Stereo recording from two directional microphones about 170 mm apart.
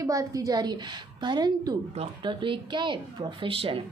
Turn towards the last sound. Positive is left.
turn(degrees=-30)  # may be behind; listen again after turning